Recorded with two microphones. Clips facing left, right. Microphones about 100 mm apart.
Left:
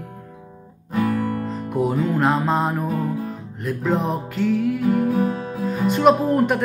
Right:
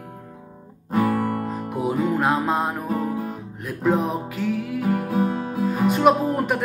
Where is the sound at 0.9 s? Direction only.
40° right (ahead or behind).